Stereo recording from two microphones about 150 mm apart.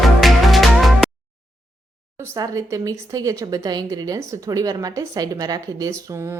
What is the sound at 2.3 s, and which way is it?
A woman's voice, 20° right (ahead or behind).